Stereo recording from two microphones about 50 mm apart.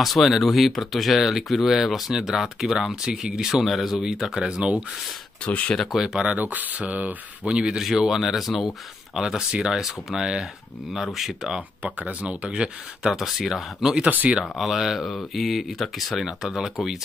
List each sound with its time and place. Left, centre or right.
0.0 s speech: centre
3.0 s speech: centre
3.3 s speech: centre
5.4 s speech: left
5.9 s speech: centre
6.2 s speech: right
7.4 s speech: centre
7.8 s speech: centre
11.8 s speech: right
13.1 s speech: centre
14.0 s speech: right
14.4 s speech: centre